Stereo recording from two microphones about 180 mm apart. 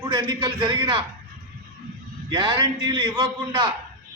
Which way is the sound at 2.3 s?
25° right (ahead or behind).